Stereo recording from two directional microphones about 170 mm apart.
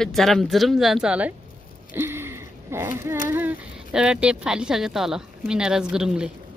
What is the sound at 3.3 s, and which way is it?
Speech, 10° right (ahead or behind).